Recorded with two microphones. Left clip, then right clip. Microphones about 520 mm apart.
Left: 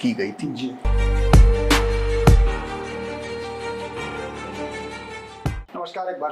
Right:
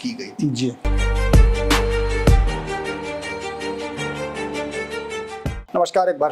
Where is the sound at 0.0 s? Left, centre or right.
Left.